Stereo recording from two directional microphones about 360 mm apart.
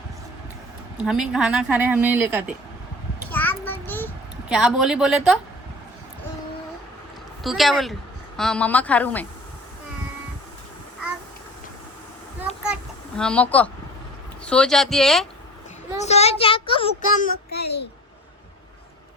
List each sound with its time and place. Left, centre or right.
0.9 s speech: centre
3.2 s a sound: centre
7.4 s speech: centre
13.1 s speech: centre
16.0 s a child's voice: centre